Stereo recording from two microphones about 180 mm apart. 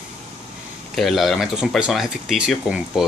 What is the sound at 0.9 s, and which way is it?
Speech, centre (ahead or behind).